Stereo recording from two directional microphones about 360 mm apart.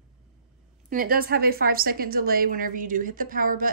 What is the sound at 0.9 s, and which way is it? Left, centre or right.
A woman's voice, right.